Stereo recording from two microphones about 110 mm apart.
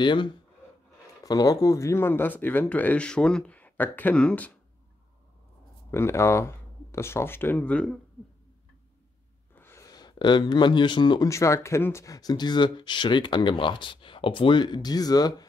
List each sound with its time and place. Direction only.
0.0 s speech: 45° left (ahead or behind)
1.2 s speech: 35° left (ahead or behind); by 4.6 s 10° left (ahead or behind)
5.9 s speech: 25° left (ahead or behind)
9.6 s a sound: 25° left (ahead or behind)
9.8 s speech: 40° left (ahead or behind)
11.2 s speech: 30° left (ahead or behind)